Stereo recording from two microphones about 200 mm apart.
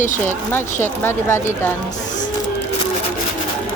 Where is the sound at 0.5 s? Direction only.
10° left (ahead or behind).